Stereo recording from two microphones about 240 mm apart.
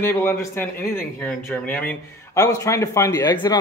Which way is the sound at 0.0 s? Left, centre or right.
Centre.